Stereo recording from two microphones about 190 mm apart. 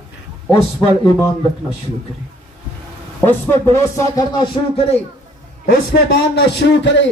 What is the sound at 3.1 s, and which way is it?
Speech, 15° left (ahead or behind).